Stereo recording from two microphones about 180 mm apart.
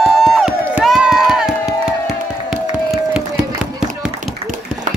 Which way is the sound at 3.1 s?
5° right (ahead or behind).